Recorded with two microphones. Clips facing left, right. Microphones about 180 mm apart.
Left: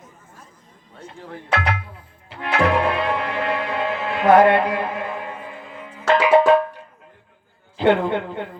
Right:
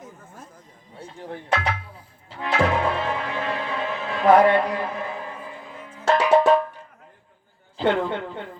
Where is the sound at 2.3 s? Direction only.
70° left (ahead or behind).